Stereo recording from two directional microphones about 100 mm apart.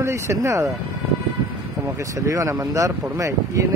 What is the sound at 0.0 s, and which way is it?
Speech, 30° right (ahead or behind).